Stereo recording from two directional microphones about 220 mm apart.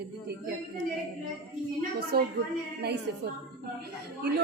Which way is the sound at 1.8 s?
45° right (ahead or behind).